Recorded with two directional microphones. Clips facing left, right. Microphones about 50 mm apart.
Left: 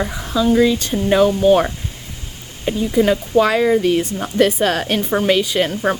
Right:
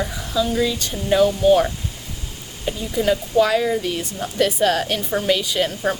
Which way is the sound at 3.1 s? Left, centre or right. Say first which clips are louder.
Right 3 dB; left.